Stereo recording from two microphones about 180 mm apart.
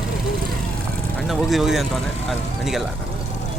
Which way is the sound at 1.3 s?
Centre (ahead or behind).